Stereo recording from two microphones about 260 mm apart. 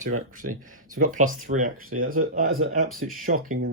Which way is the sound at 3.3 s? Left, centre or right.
Right.